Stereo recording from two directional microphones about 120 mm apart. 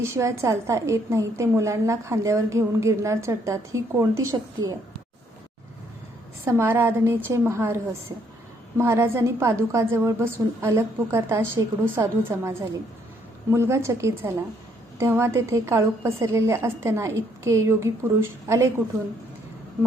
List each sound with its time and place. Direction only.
0.0 s a woman's voice: 25° right (ahead or behind)
6.4 s a woman's voice: 20° right (ahead or behind)
8.8 s a woman's voice: 20° right (ahead or behind)